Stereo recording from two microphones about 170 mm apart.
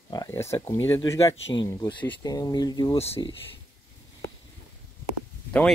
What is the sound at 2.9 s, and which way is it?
Speech, 35° left (ahead or behind).